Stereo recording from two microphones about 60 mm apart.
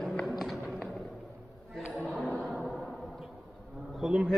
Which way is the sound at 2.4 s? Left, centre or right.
Centre.